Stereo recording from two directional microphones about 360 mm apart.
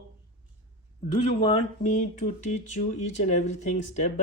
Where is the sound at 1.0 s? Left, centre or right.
Centre.